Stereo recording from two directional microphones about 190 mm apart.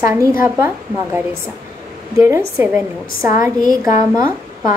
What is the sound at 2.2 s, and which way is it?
A woman's voice, 15° right (ahead or behind).